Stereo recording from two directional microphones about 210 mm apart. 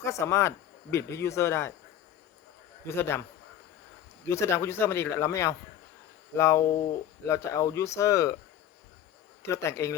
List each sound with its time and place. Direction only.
0.0 s speech: 15° left (ahead or behind)
2.8 s speech: 10° left (ahead or behind)
4.3 s speech: 15° left (ahead or behind)
9.4 s speech: 15° left (ahead or behind)